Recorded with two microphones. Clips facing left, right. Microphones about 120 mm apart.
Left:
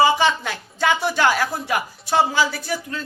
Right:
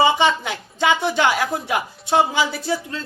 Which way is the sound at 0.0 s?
20° right (ahead or behind).